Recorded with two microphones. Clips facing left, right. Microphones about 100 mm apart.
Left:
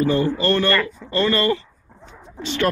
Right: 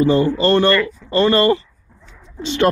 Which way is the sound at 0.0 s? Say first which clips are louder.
Right 4 dB; 20° right (ahead or behind).